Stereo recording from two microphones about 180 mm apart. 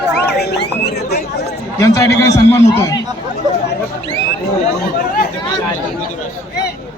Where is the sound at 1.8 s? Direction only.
15° left (ahead or behind).